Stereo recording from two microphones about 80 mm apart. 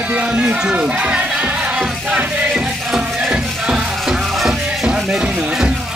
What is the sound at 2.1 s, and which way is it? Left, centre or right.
Music, centre.